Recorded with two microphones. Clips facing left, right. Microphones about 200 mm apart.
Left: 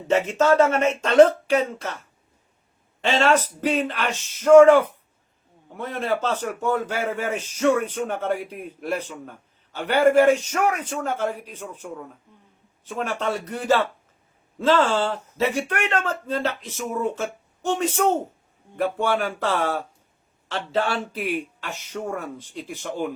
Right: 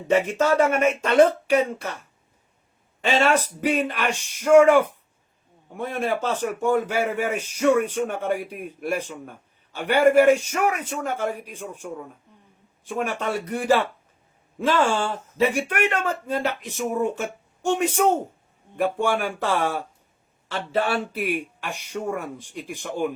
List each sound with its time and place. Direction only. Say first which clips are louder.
0.1 s speech: left 1 dB; 10° right (ahead or behind)
3.0 s speech: left 1 dB; 10° right (ahead or behind)